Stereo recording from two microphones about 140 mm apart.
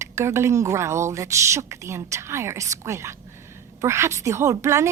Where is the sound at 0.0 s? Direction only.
20° right (ahead or behind).